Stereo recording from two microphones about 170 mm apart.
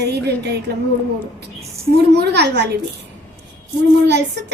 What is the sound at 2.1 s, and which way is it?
Speech, 75° right (ahead or behind).